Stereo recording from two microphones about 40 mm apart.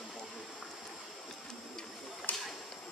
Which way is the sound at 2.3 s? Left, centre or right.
Left.